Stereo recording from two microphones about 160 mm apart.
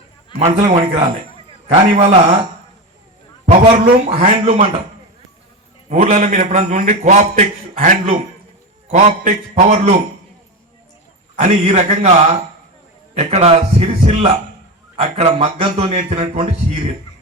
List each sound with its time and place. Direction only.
0.3 s a man's voice: 45° right (ahead or behind)
3.4 s a man's voice: 45° right (ahead or behind)
5.9 s a man's voice: 50° right (ahead or behind)
11.3 s a man's voice: 45° right (ahead or behind)